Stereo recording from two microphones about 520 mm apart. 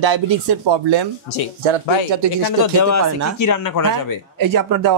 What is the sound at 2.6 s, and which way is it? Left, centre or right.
Speech, left.